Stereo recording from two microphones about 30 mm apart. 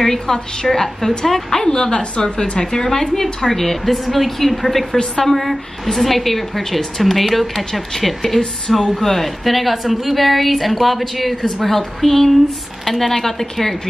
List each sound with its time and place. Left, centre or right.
0.0 s a woman's voice: centre
1.8 s a woman's voice: left
2.6 s a woman's voice: centre